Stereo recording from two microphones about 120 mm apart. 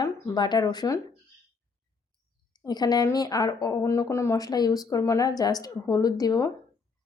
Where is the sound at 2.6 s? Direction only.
35° left (ahead or behind).